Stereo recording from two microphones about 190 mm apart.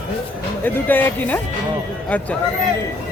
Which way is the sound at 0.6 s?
10° left (ahead or behind).